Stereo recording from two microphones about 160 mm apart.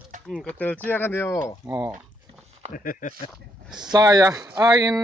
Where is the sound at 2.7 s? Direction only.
55° left (ahead or behind).